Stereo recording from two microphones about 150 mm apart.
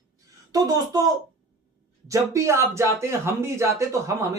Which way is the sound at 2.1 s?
20° right (ahead or behind).